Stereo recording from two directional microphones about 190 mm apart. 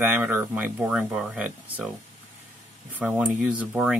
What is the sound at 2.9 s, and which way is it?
Speech, 10° right (ahead or behind).